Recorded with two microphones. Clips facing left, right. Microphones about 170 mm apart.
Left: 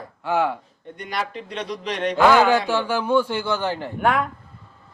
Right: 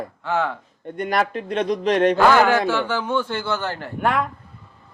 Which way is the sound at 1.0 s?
50° right (ahead or behind).